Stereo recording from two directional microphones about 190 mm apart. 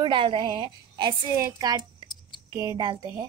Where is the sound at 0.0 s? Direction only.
25° right (ahead or behind).